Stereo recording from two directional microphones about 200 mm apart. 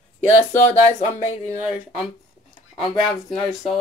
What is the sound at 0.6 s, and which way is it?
Speech, 35° left (ahead or behind).